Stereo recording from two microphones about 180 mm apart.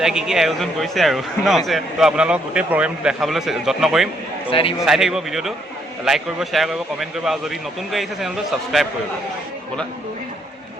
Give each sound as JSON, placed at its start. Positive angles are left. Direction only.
{"t": 0.0, "sound": "speech", "side_deg": -5}
{"t": 4.4, "sound": "a man's voice", "side_deg": 30}
{"t": 4.8, "sound": "speech", "side_deg": 0}